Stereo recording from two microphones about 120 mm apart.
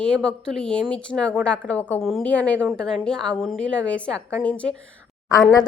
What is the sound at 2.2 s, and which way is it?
A woman's voice, 10° left (ahead or behind).